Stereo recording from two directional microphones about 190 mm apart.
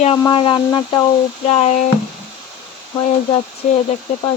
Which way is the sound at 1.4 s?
35° left (ahead or behind).